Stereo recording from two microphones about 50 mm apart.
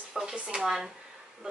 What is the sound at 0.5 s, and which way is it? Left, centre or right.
Speech, centre.